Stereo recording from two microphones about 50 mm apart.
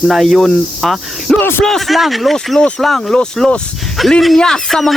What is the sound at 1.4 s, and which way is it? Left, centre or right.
Speech, left.